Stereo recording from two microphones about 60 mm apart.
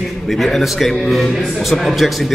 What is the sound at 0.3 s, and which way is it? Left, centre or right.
Speech, centre.